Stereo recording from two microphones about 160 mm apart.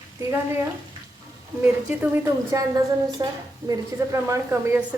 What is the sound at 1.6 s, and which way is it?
A woman's voice, 10° right (ahead or behind).